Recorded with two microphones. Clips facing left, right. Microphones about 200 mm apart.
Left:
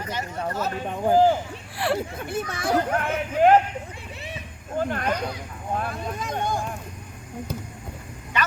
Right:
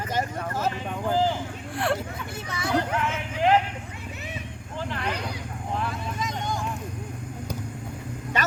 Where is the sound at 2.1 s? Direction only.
55° left (ahead or behind).